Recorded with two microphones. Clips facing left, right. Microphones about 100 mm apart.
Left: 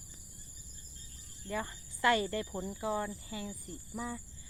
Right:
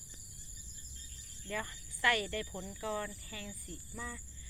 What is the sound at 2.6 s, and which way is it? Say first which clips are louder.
Speech: left 5 dB; 25° left (ahead or behind).